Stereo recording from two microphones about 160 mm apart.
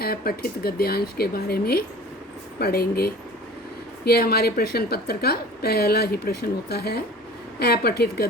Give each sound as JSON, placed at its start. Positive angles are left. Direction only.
{"t": 0.0, "sound": "a woman's voice", "side_deg": 70}